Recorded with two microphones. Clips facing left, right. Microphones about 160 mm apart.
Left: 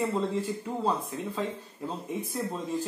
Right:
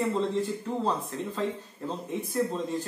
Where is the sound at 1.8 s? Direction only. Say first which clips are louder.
Right 1 dB; 10° left (ahead or behind).